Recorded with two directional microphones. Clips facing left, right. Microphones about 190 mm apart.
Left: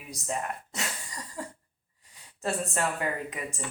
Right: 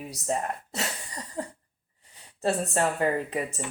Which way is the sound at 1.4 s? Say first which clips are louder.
Right 4 dB; 35° right (ahead or behind).